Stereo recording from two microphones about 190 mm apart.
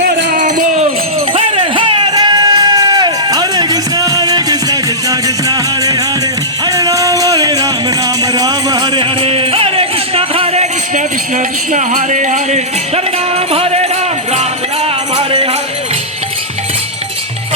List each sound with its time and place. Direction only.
1.3 s music: 25° right (ahead or behind)
15.1 s music: 30° right (ahead or behind)